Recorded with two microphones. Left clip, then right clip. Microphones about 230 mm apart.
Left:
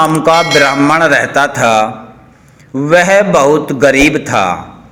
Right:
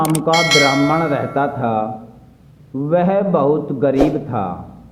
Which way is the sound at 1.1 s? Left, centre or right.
Centre.